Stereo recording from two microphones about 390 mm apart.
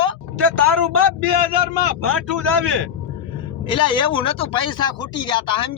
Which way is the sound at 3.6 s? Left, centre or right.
Centre.